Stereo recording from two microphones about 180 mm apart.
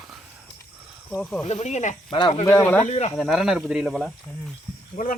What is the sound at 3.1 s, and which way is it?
Speech, centre (ahead or behind).